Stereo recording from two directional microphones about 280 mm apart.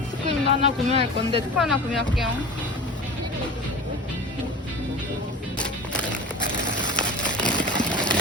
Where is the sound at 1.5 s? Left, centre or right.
Centre.